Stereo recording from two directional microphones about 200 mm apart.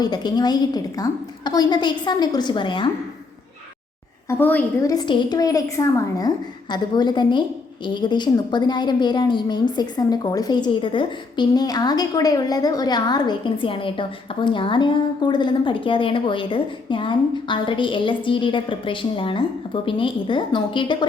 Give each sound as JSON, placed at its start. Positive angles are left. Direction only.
{"t": 0.0, "sound": "a woman's voice", "side_deg": 20}
{"t": 4.3, "sound": "a woman's voice", "side_deg": 10}